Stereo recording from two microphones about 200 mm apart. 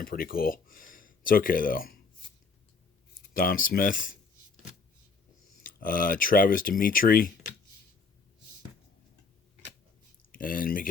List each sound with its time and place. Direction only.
0.0 s speech: 45° left (ahead or behind)
3.3 s speech: 45° left (ahead or behind)
5.6 s speech: 45° left (ahead or behind)
10.3 s speech: 45° left (ahead or behind)